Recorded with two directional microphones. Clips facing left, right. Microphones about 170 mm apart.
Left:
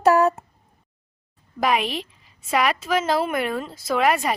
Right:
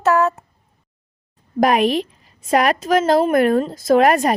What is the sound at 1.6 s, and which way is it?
A woman's voice, 45° right (ahead or behind).